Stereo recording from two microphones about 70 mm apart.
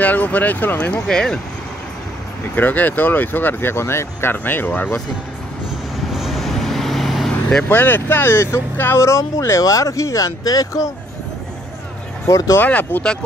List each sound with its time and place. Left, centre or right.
0.0 s speech: left
0.9 s speech: centre
2.5 s speech: left
6.1 s vehicle: centre
7.6 s speech: left
9.0 s speech: left
12.3 s speech: left
12.5 s speech: left